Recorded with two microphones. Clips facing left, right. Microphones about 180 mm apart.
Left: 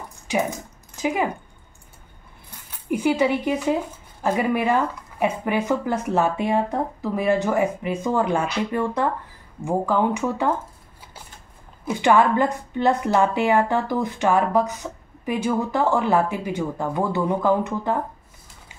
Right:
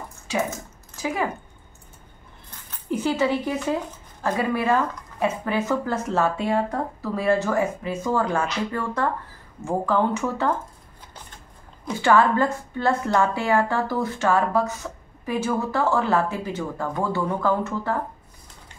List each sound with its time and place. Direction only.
0.3 s a sound: 15° left (ahead or behind)
2.5 s dog: 10° left (ahead or behind)
4.2 s a woman's voice: 15° left (ahead or behind)
11.8 s a woman's voice: 15° left (ahead or behind)